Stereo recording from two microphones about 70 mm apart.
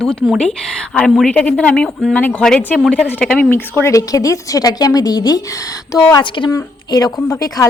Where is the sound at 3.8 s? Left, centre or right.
Left.